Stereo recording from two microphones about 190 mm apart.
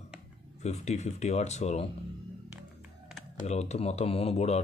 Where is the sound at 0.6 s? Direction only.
35° left (ahead or behind).